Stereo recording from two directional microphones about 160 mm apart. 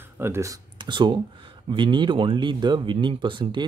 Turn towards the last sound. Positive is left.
turn(degrees=-30)  # may be behind; listen again after turning